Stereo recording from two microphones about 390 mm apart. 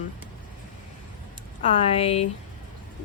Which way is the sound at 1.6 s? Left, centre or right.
Centre.